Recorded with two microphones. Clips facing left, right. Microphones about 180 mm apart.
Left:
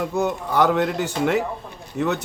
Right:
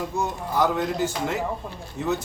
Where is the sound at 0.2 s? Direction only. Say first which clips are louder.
Left 4 dB; 65° left (ahead or behind).